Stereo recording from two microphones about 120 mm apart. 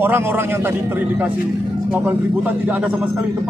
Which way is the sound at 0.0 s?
20° right (ahead or behind).